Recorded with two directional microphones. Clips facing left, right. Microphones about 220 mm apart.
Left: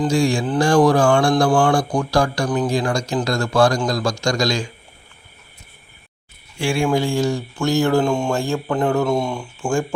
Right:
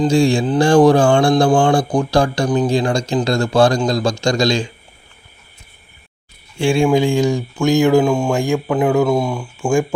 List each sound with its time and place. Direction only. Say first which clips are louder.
0.1 s a man's voice: right 4 dB; 25° right (ahead or behind)
6.6 s a man's voice: right 5 dB; 20° right (ahead or behind); by 9.5 s 5° right (ahead or behind)